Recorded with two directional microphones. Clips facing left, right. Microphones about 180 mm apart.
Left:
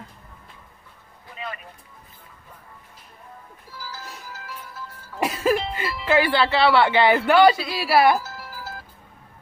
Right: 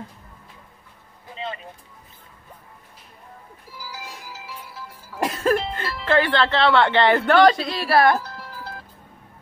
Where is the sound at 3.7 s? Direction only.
15° right (ahead or behind).